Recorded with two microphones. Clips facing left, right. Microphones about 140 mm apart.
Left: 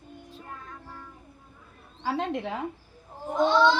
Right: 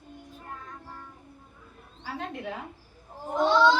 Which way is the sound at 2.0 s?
90° left.